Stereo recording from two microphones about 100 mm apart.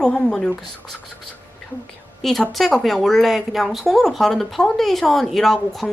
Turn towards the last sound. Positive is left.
turn(degrees=0)  # may be behind; listen again after turning